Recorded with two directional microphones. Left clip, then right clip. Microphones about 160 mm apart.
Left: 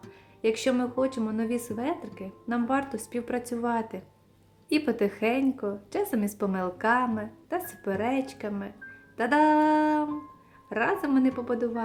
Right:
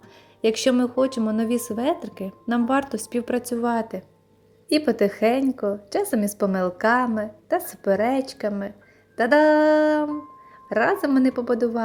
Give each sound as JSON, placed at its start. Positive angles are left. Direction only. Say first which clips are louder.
{"t": 0.4, "sound": "a woman's voice", "louder": "right 6 dB", "side_deg": -30}